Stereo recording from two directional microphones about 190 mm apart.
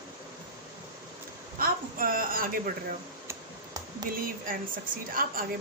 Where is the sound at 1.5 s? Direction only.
50° right (ahead or behind).